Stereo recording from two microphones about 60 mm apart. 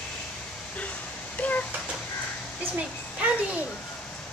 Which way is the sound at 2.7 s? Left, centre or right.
Centre.